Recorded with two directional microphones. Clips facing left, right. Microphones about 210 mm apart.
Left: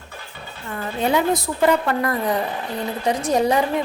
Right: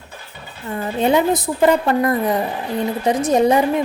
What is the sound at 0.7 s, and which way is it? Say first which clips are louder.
A woman's voice: right 4 dB; 20° right (ahead or behind).